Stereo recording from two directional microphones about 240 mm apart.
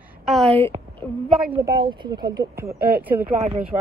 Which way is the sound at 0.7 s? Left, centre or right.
Right.